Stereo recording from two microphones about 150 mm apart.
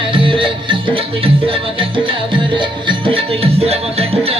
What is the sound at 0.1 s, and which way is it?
Music, 35° right (ahead or behind).